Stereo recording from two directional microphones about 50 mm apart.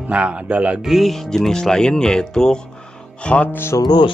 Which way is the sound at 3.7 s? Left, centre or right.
Left.